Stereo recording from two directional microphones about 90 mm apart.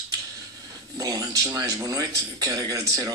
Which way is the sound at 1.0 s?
45° right (ahead or behind).